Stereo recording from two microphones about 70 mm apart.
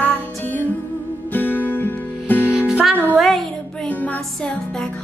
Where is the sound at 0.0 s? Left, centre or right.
Left.